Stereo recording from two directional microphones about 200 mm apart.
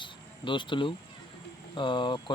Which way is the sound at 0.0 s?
25° left (ahead or behind).